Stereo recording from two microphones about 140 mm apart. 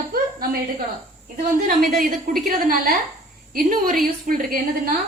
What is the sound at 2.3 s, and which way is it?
A woman's voice, 90° right.